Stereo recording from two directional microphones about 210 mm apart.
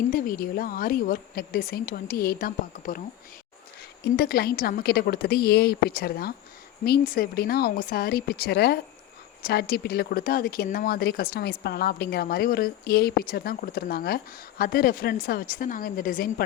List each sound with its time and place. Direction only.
0.1 s speech: 40° left (ahead or behind)
4.0 s speech: 45° left (ahead or behind)